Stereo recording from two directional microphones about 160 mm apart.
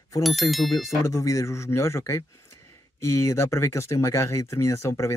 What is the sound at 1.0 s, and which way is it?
Speech, 20° left (ahead or behind).